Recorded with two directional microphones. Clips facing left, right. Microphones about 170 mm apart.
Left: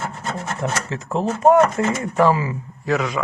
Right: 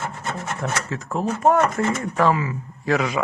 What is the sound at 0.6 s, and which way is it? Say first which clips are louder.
Speech: left 2 dB; 25° left (ahead or behind).